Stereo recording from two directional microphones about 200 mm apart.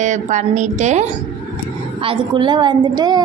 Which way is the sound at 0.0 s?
35° right (ahead or behind).